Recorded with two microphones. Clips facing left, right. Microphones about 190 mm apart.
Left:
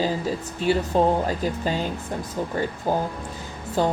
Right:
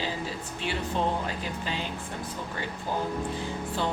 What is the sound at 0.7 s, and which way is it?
A woman's voice, 40° left (ahead or behind).